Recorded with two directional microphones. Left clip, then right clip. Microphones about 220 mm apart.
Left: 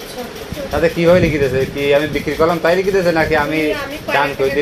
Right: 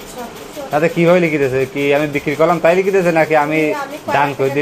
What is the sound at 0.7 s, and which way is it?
Speech, 40° right (ahead or behind).